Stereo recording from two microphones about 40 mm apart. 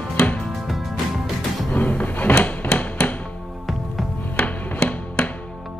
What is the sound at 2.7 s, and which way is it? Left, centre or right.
Music, left.